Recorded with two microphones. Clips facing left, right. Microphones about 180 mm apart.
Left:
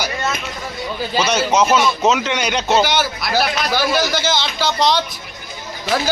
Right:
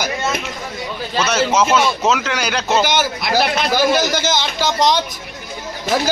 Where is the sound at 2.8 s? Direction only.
20° right (ahead or behind).